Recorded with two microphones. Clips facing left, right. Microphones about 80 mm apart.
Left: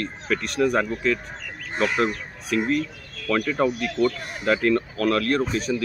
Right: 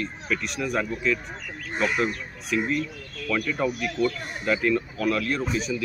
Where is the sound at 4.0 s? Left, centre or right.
Centre.